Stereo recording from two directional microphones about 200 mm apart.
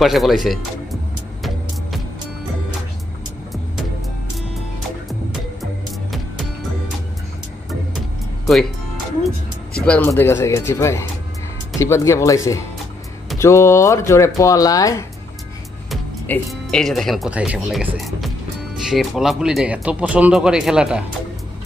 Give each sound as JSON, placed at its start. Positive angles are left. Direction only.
{"t": 0.0, "sound": "speech", "side_deg": 0}
{"t": 1.4, "sound": "music", "side_deg": 0}
{"t": 9.8, "sound": "speech", "side_deg": 5}
{"t": 15.9, "sound": "speech", "side_deg": 5}
{"t": 17.9, "sound": "music", "side_deg": 0}
{"t": 18.8, "sound": "speech", "side_deg": 0}